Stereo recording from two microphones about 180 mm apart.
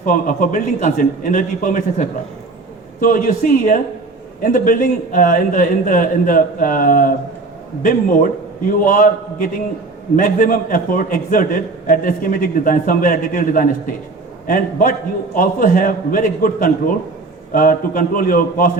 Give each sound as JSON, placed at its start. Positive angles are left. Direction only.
{"t": 0.0, "sound": "a man's voice", "side_deg": 45}